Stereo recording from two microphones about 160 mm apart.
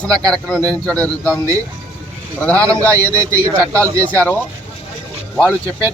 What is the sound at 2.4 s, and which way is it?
Speech, 10° left (ahead or behind).